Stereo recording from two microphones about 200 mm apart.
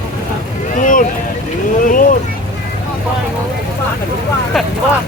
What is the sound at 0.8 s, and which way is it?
Boat, 40° left (ahead or behind).